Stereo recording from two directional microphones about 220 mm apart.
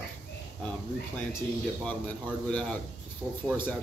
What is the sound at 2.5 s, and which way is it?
Speech, 5° left (ahead or behind).